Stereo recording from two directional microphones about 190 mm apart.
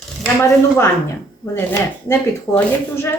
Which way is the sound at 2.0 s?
15° left (ahead or behind).